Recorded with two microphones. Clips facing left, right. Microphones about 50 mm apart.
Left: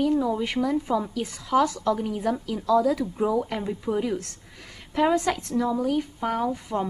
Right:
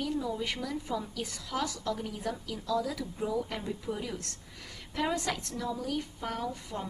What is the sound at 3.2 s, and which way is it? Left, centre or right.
Speech, left.